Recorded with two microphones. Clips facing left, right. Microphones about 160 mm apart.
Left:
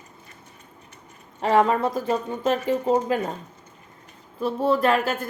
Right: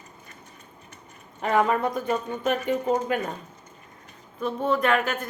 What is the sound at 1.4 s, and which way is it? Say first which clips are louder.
Speech: left 3 dB; 30° left (ahead or behind).